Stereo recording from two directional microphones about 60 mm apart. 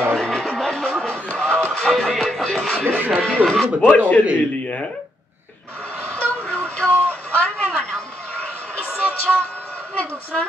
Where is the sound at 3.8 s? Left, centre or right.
Left.